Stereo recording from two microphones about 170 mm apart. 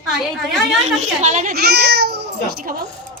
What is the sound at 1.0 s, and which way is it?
Speech, 45° right (ahead or behind).